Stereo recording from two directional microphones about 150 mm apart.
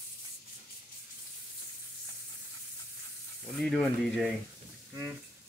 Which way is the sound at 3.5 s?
5° left (ahead or behind).